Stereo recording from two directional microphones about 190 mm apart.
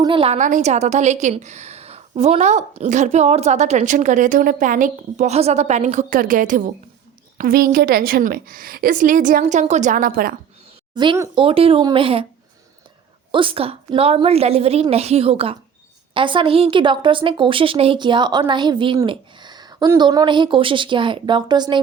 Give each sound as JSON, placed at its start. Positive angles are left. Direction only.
{"t": 0.0, "sound": "a woman's voice", "side_deg": -25}
{"t": 0.3, "sound": "a woman's voice", "side_deg": -40}
{"t": 10.9, "sound": "a woman's voice", "side_deg": -25}
{"t": 13.3, "sound": "a woman's voice", "side_deg": -25}